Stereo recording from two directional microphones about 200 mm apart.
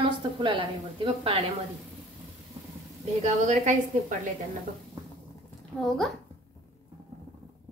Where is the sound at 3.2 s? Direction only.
35° right (ahead or behind).